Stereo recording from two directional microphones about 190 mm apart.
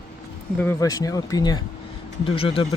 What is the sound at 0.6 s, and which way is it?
Speech, 15° left (ahead or behind).